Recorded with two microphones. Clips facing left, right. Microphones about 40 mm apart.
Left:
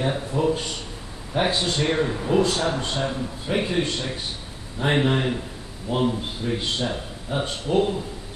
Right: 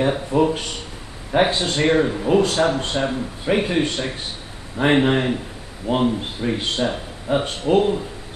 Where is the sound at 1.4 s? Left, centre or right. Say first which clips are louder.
Right 4 dB; right.